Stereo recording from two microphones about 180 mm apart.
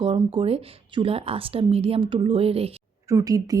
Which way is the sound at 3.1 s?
20° right (ahead or behind).